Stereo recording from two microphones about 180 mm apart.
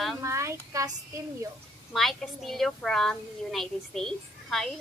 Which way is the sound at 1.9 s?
Centre (ahead or behind).